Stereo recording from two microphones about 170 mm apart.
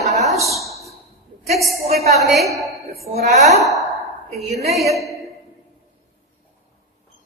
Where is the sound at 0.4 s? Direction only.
Centre (ahead or behind).